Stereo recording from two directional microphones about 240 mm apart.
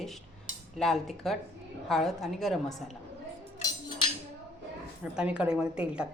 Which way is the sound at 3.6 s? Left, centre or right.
Centre.